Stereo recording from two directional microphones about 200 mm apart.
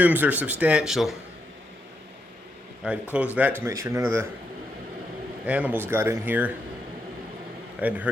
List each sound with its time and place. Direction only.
0.0 s speech: 10° right (ahead or behind)
2.8 s speech: 5° right (ahead or behind)
3.6 s speech: 15° right (ahead or behind)
5.5 s speech: 5° right (ahead or behind)
7.8 s speech: 5° right (ahead or behind)